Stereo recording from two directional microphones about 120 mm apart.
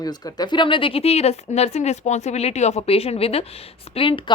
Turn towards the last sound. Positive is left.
turn(degrees=45)  # may be behind; listen again after turning